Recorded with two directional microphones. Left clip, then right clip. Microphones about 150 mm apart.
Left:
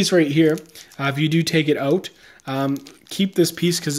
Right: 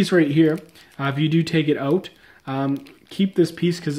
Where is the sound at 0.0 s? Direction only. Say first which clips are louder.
Left 1 dB; 5° left (ahead or behind).